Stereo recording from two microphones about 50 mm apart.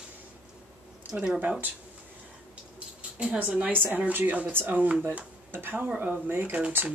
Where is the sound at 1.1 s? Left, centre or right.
Right.